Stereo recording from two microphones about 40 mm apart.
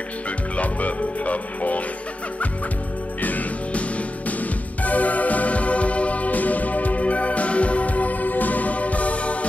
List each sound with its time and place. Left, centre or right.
0.6 s music: left
3.2 s music: left